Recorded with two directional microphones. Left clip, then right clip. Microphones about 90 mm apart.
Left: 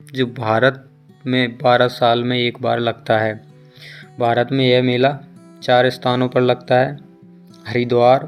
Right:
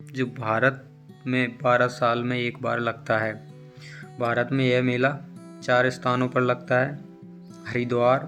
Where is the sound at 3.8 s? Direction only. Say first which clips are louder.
Left 9 dB; 40° left (ahead or behind).